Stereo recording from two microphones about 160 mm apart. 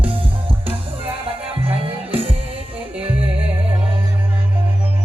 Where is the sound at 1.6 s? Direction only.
35° right (ahead or behind).